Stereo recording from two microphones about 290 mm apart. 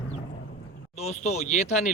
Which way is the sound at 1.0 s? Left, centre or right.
Left.